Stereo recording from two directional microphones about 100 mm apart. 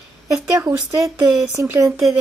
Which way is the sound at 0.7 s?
35° right (ahead or behind).